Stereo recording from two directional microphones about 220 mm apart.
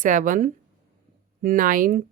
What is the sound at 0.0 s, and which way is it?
Speech, 35° right (ahead or behind).